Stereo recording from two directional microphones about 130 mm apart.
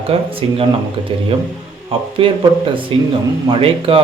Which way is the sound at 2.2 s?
45° right (ahead or behind).